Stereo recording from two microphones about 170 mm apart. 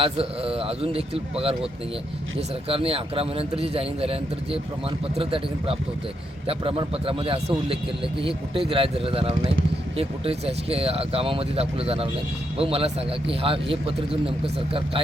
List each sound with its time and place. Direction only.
0.0 s speech: 35° right (ahead or behind)
2.6 s speech: 35° right (ahead or behind)